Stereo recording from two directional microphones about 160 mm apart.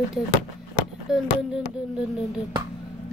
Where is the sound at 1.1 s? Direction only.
Centre (ahead or behind).